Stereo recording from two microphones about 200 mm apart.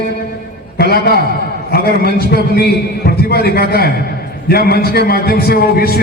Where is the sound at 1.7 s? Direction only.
50° left (ahead or behind).